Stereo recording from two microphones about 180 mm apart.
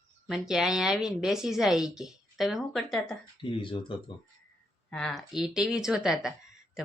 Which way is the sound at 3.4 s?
30° left (ahead or behind).